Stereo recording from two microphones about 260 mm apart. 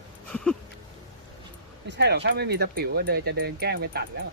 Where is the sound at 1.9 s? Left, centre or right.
Right.